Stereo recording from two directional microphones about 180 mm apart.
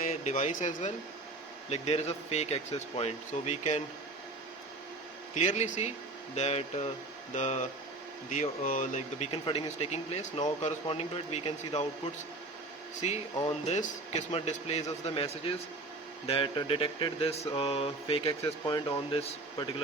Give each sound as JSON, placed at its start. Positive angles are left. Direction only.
{"t": 0.1, "sound": "speech", "side_deg": 40}
{"t": 5.3, "sound": "speech", "side_deg": 40}
{"t": 13.7, "sound": "speech", "side_deg": 40}
{"t": 18.4, "sound": "speech", "side_deg": 20}
{"t": 19.1, "sound": "speech", "side_deg": 30}